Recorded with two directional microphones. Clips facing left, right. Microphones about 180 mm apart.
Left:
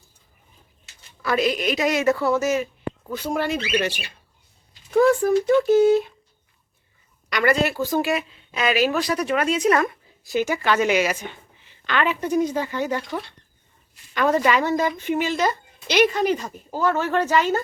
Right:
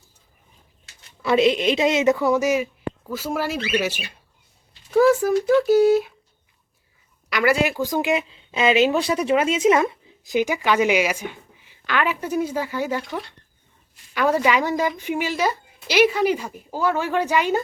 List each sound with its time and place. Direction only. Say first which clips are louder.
1.2 s a woman's voice: right 4 dB; 25° right (ahead or behind); by 6.1 s 5° right (ahead or behind)
7.3 s speech: right 1 dB; 5° right (ahead or behind)